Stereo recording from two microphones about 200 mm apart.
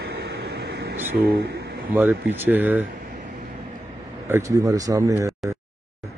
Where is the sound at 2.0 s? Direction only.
10° right (ahead or behind).